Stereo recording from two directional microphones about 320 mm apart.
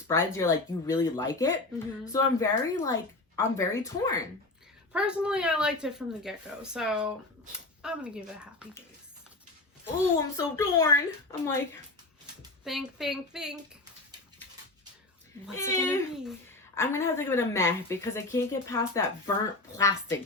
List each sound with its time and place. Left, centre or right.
0.1 s a woman's voice: centre
4.9 s speech: centre
10.3 s a woman's voice: centre
12.6 s speech: centre
15.5 s a woman's voice: centre